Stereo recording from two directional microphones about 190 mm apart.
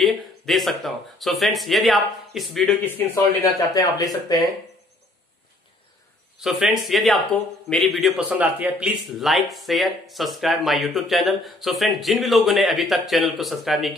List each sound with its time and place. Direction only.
0.0 s speech: centre (ahead or behind)
3.5 s speech: 20° left (ahead or behind)
6.4 s speech: centre (ahead or behind)